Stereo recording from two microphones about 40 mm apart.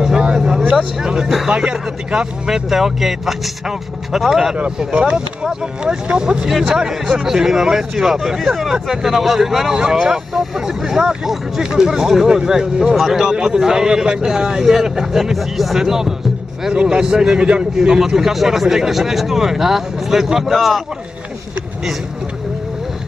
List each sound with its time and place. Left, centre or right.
0.0 s vehicle: centre
0.7 s speech: centre
1.5 s speech: right
2.5 s speech: centre
4.6 s speech: right
16.7 s speech: right; by 20.8 s centre